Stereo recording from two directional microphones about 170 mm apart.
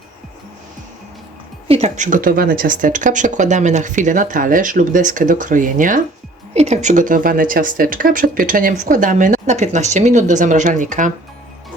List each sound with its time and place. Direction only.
1.6 s speech: 40° right (ahead or behind)